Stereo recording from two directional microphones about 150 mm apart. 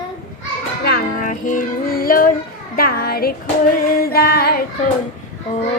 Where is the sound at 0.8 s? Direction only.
90° left.